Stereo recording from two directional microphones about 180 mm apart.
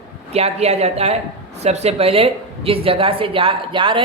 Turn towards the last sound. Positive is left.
turn(degrees=-30)  # may be behind; listen again after turning